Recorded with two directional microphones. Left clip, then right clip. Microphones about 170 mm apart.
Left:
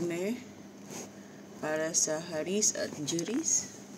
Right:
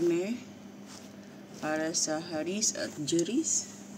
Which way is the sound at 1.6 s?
20° left (ahead or behind).